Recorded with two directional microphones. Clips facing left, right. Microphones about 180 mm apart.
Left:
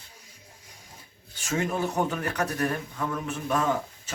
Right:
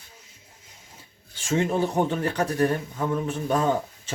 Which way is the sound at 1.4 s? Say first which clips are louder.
Right 4 dB; 25° right (ahead or behind).